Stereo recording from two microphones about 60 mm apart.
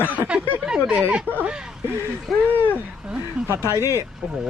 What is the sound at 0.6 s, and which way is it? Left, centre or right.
Speech, centre.